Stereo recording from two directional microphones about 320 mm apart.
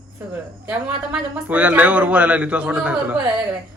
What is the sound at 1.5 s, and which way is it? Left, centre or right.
A man's voice, centre.